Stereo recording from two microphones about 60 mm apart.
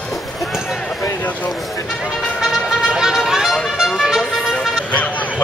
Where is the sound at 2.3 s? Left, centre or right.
Centre.